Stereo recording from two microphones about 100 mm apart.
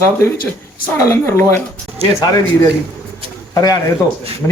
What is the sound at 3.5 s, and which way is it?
Speech, 40° left (ahead or behind).